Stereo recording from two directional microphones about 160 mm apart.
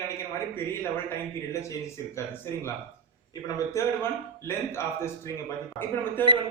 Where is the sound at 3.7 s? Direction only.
15° left (ahead or behind).